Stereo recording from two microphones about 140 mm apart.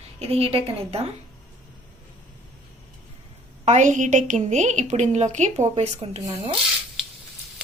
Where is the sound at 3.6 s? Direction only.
60° right (ahead or behind).